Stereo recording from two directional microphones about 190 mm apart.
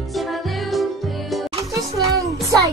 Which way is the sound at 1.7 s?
15° right (ahead or behind).